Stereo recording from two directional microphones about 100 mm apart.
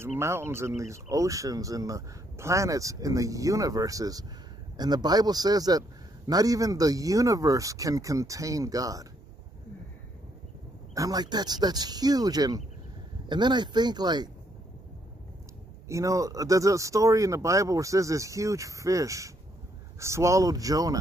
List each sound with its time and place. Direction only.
0.0 s speech: 25° right (ahead or behind)
11.0 s speech: 40° right (ahead or behind)
15.9 s speech: 30° right (ahead or behind)